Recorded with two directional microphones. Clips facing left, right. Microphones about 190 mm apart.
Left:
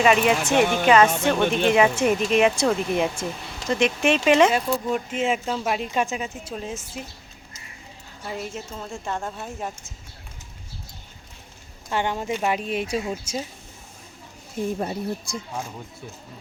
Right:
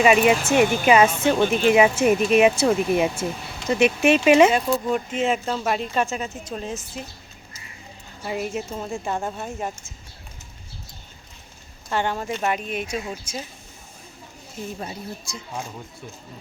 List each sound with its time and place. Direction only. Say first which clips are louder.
0.0 s speech: right 2 dB; 10° right (ahead or behind)
4.9 s speech: right 1 dB; 5° left (ahead or behind)
8.2 s speech: right 5 dB; 10° right (ahead or behind)
11.9 s speech: even; 15° left (ahead or behind)
12.5 s speech: left 2 dB; 25° left (ahead or behind)
14.8 s speech: left 6 dB; 45° left (ahead or behind)